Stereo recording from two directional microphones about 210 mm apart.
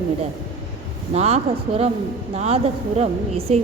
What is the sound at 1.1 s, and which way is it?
A woman's voice, 30° right (ahead or behind).